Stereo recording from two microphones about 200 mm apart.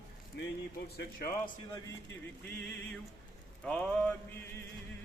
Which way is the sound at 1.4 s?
20° left (ahead or behind).